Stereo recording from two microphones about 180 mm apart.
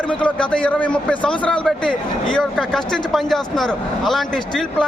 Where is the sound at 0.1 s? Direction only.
5° left (ahead or behind).